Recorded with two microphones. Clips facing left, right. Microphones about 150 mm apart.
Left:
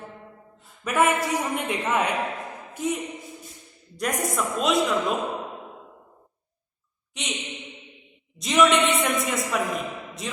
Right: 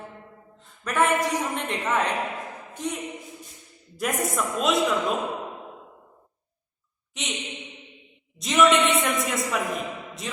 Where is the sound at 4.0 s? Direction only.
Centre (ahead or behind).